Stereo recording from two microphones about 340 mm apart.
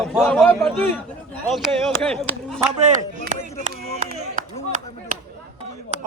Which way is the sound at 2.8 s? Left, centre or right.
Right.